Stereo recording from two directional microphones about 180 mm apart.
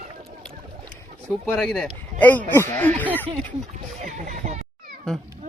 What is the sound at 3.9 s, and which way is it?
Speech, 45° right (ahead or behind).